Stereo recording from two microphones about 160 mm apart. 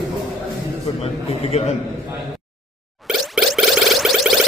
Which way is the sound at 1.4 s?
40° left (ahead or behind).